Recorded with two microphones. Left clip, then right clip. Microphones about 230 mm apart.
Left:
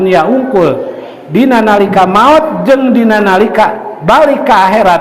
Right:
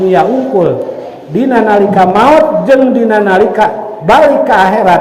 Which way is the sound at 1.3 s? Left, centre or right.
Left.